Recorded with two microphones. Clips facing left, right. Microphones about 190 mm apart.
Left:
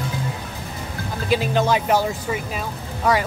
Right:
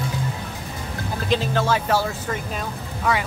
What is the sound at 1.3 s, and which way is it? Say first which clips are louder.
Speech: left 2 dB; 15° left (ahead or behind).